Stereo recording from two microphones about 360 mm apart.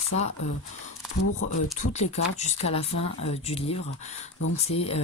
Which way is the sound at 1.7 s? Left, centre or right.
Centre.